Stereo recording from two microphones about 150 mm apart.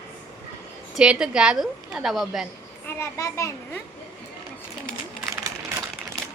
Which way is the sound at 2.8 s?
20° left (ahead or behind).